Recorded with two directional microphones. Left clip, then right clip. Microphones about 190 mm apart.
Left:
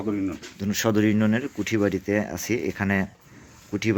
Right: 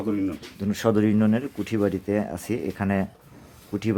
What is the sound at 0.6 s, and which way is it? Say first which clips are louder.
Speech: even; 10° right (ahead or behind).